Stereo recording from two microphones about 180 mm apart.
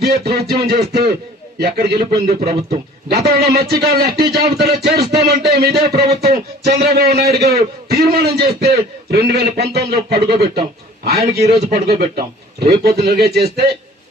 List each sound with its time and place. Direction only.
0.0 s speech: 60° right (ahead or behind)
2.4 s a man's voice: 35° right (ahead or behind)
3.2 s speech: 60° right (ahead or behind)